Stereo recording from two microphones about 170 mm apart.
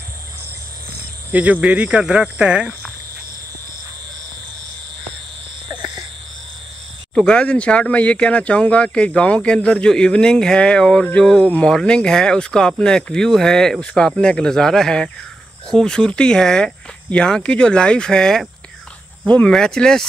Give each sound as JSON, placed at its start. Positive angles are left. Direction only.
{"t": 1.3, "sound": "speech", "side_deg": -10}
{"t": 5.7, "sound": "frog", "side_deg": -25}
{"t": 7.2, "sound": "speech", "side_deg": 5}